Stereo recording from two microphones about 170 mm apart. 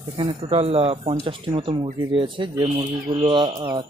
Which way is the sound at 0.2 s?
30° right (ahead or behind).